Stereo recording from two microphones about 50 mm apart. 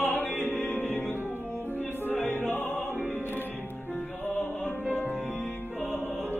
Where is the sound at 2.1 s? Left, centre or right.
Left.